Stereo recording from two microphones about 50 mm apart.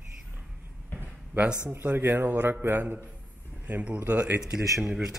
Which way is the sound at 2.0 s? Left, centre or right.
Right.